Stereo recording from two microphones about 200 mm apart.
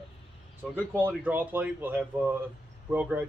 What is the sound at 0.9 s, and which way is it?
Speech, 10° right (ahead or behind).